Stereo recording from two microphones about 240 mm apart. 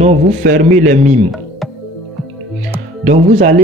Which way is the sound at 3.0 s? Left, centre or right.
Right.